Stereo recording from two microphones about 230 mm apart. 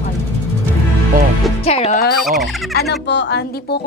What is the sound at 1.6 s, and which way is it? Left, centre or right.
Speech, left.